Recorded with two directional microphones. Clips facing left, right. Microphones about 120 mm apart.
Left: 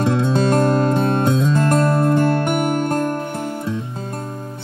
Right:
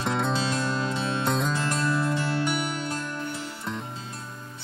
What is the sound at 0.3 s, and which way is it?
Music, 50° left (ahead or behind).